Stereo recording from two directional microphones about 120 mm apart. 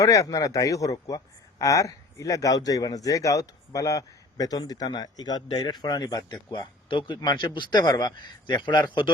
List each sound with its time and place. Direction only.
0.0 s a man's voice: 30° left (ahead or behind)